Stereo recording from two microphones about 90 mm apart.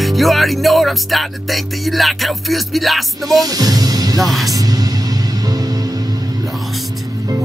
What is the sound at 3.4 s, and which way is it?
Music, 45° right (ahead or behind).